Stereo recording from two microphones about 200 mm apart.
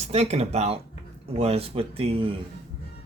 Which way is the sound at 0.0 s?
30° right (ahead or behind).